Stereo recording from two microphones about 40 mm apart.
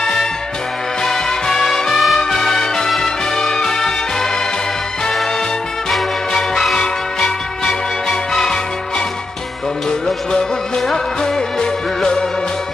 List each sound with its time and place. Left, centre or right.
0.0 s music: centre
6.7 s music: centre